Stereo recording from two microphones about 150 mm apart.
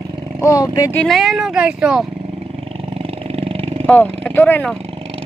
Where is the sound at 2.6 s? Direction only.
40° right (ahead or behind).